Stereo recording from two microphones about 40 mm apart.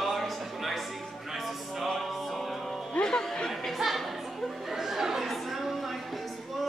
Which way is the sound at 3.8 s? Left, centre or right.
Centre.